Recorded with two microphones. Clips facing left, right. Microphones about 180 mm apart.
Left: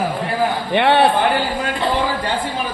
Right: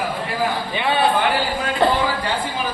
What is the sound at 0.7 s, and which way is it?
Speech, 70° left (ahead or behind).